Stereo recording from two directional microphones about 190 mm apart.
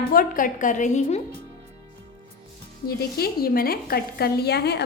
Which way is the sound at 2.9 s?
55° left (ahead or behind).